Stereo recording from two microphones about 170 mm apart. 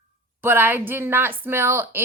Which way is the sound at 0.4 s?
10° right (ahead or behind).